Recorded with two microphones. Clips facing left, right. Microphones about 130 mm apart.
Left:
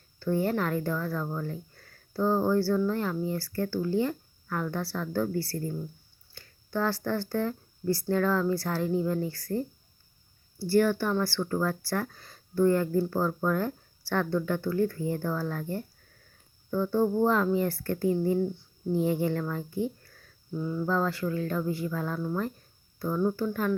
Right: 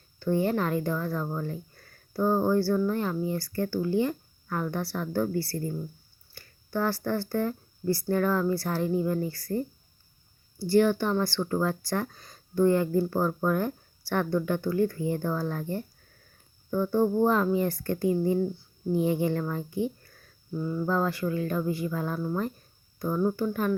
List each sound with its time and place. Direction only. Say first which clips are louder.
0.2 s speech: right 1 dB; 15° right (ahead or behind)
8.9 s speech: even; 5° right (ahead or behind)
20.5 s speech: right 1 dB; centre (ahead or behind)
20.8 s speech: right 1 dB; 15° right (ahead or behind)